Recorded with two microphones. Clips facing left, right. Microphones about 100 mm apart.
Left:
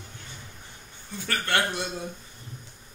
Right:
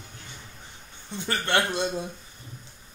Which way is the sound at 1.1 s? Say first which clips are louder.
Right 2 dB; 20° right (ahead or behind).